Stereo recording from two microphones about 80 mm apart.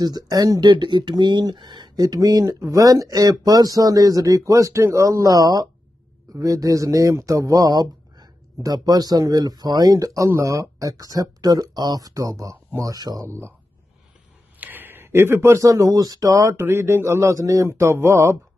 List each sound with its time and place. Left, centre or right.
0.0 s speech: right
14.6 s a sound: right
15.5 s speech: right
16.5 s a man's voice: right